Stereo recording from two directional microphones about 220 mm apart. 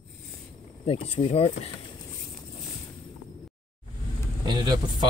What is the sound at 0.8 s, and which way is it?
Speech, 25° left (ahead or behind).